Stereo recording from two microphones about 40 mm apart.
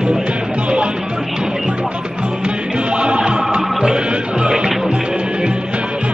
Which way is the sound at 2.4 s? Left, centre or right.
Right.